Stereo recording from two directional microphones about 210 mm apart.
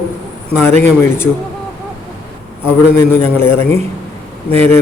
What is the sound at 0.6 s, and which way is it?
Speech, 10° left (ahead or behind).